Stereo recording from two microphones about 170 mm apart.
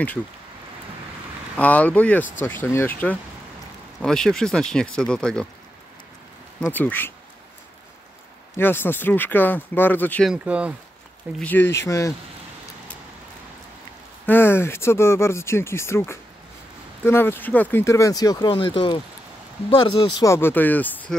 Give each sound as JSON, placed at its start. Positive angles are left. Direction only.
{"t": 1.6, "sound": "speech", "side_deg": 10}
{"t": 6.6, "sound": "speech", "side_deg": 10}
{"t": 8.5, "sound": "speech", "side_deg": 10}
{"t": 10.3, "sound": "speech", "side_deg": -5}
{"t": 11.3, "sound": "speech", "side_deg": 10}
{"t": 14.2, "sound": "speech", "side_deg": 10}
{"t": 20.2, "sound": "speech", "side_deg": 15}